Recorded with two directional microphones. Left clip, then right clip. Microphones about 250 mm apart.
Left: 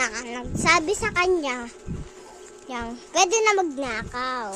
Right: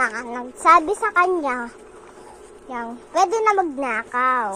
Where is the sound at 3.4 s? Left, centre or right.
Left.